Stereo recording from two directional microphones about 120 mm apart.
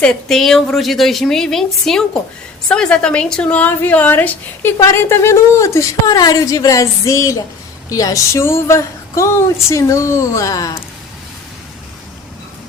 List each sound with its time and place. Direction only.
0.0 s a woman's voice: 5° left (ahead or behind); by 10.8 s 30° left (ahead or behind)